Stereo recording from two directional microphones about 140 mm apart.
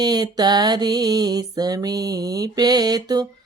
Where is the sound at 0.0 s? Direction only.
30° right (ahead or behind).